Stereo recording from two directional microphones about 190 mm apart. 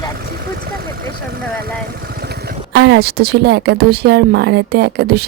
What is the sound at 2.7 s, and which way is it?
A woman's voice, 60° right (ahead or behind).